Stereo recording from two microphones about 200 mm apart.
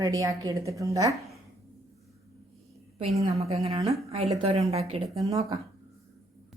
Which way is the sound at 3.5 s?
30° right (ahead or behind).